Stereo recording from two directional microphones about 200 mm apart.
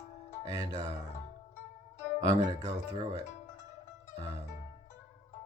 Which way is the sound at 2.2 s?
15° right (ahead or behind).